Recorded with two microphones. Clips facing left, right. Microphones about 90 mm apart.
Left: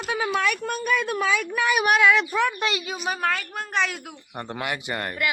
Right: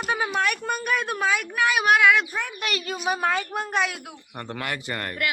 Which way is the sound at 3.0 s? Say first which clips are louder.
Right 2 dB; 10° right (ahead or behind).